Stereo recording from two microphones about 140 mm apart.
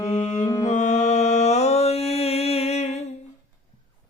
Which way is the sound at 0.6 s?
60° left (ahead or behind).